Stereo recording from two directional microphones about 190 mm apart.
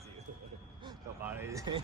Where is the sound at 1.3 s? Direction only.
15° right (ahead or behind).